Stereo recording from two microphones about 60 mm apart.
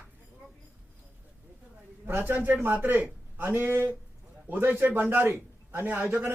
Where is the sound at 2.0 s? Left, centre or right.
Right.